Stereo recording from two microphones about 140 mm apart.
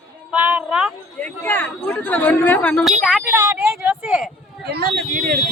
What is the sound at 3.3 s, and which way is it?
A woman's voice, 15° right (ahead or behind).